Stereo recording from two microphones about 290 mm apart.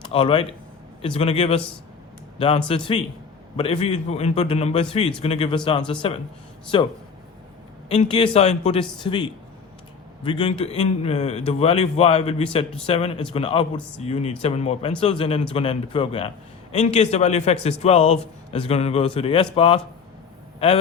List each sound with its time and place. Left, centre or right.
0.1 s a man's voice: centre